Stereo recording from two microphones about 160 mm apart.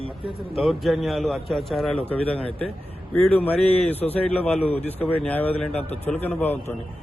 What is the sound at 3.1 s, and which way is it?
A man's voice, 10° left (ahead or behind).